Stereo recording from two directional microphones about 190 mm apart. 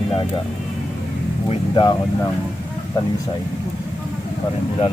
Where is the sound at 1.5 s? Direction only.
25° left (ahead or behind).